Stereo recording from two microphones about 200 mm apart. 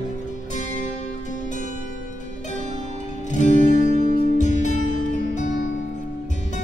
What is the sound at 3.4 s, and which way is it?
Music, 35° left (ahead or behind).